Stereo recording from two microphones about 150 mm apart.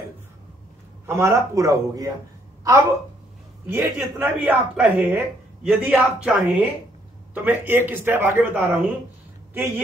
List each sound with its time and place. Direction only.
1.0 s a man's voice: 15° right (ahead or behind)
3.6 s a woman's voice: 15° right (ahead or behind)